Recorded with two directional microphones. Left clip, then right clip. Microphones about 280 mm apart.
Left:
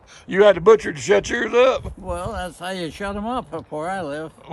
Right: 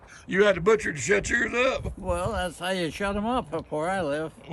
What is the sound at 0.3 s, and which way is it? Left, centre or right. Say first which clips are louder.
Speech: left 8 dB; centre.